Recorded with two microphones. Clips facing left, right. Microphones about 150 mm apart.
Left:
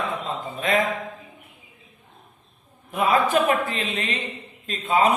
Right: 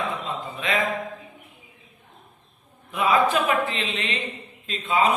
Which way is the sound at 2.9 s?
50° left (ahead or behind).